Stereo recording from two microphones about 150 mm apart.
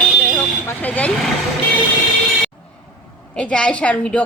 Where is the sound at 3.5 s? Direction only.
5° left (ahead or behind).